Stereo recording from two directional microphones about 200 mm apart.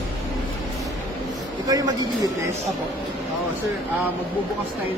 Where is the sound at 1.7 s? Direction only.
20° right (ahead or behind).